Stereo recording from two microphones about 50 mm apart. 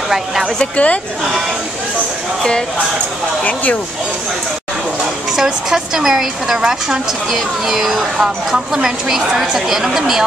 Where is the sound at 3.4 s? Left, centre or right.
Left.